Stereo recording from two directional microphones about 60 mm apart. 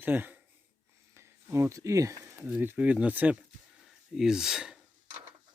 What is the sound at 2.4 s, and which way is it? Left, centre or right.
Speech, right.